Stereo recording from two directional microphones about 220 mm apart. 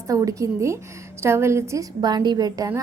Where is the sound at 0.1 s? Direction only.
15° right (ahead or behind).